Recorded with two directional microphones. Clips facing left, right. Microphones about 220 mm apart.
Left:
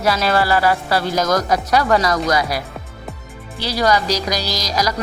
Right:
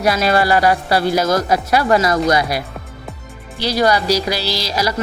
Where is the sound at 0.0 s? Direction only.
15° right (ahead or behind).